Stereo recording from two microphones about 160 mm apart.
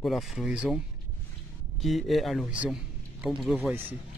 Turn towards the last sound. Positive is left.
turn(degrees=-10)  # may be behind; listen again after turning